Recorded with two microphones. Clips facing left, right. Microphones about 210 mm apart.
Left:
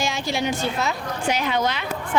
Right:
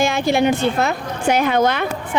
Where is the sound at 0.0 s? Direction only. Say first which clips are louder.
Right 8 dB; 55° right (ahead or behind).